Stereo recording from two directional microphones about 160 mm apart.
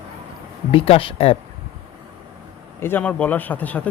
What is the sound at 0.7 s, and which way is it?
Speech, 35° left (ahead or behind).